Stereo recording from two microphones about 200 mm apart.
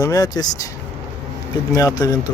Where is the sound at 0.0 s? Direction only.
20° left (ahead or behind).